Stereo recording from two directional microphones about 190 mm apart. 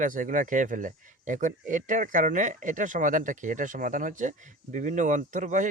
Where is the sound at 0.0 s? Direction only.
45° right (ahead or behind).